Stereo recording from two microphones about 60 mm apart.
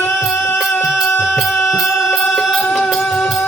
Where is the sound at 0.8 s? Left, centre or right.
Centre.